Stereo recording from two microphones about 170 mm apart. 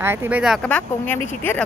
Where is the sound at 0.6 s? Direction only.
10° left (ahead or behind).